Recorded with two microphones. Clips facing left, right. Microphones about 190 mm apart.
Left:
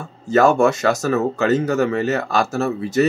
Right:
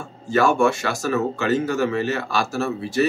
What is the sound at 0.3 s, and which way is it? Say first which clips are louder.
Speech: left 4 dB; 40° left (ahead or behind).